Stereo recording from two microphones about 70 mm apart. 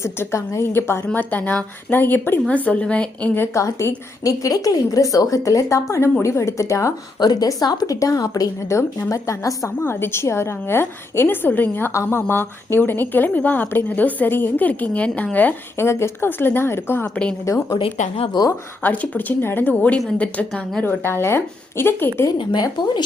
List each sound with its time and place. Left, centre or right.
0.0 s a woman's voice: left
1.0 s speech: left
3.5 s a woman's voice: left
7.2 s a woman's voice: left
8.7 s a woman's voice: left
9.8 s a woman's voice: left
15.8 s a woman's voice: left
17.4 s a woman's voice: left
18.4 s speech: left
18.8 s a woman's voice: left
19.8 s a woman's voice: centre
20.8 s a woman's voice: left
22.5 s a woman's voice: left